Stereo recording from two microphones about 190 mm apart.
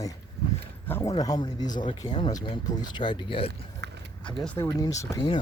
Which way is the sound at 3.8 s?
65° right (ahead or behind).